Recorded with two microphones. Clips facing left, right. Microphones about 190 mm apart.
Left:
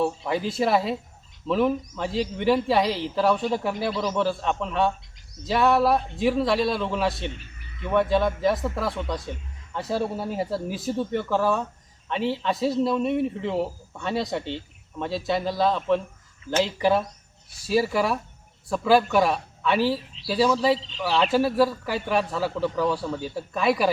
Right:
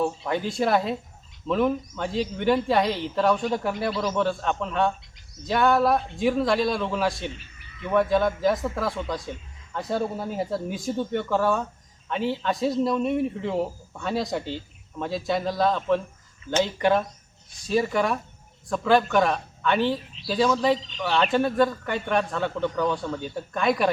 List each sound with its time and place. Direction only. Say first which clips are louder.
0.0 s a man's voice: left 1 dB; centre (ahead or behind)
20.7 s speech: even; 30° left (ahead or behind)
21.0 s a man's voice: left 1 dB; centre (ahead or behind)